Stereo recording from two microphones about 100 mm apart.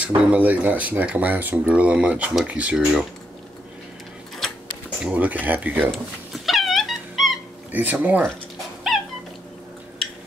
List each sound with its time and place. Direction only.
0.0 s speech: 15° right (ahead or behind)
5.0 s speech: 15° right (ahead or behind)
5.9 s cat: centre (ahead or behind)
7.7 s speech: 15° right (ahead or behind)